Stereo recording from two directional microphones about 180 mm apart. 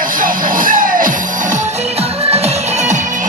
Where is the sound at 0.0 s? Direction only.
50° right (ahead or behind).